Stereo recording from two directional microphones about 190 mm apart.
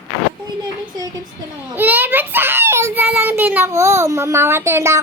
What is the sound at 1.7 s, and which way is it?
A child's voice, 10° right (ahead or behind).